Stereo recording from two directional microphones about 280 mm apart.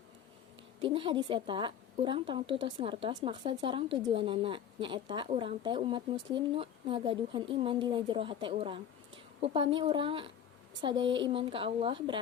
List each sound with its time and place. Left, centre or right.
0.8 s a woman's voice: centre